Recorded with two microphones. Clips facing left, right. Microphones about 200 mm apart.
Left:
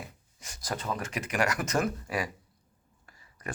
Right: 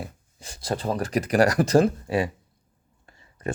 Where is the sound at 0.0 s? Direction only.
30° right (ahead or behind).